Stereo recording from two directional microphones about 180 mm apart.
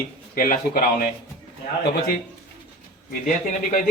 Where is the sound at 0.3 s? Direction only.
50° left (ahead or behind).